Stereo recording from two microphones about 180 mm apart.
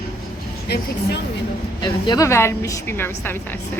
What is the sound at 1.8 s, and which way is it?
A woman's voice, 20° left (ahead or behind).